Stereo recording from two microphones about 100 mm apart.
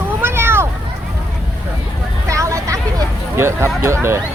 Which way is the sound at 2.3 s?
30° right (ahead or behind).